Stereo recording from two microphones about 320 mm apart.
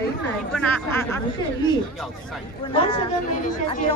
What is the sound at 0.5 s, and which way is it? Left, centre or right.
Speech, centre.